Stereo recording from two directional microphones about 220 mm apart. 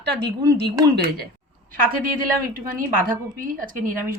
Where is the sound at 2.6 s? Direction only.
40° right (ahead or behind).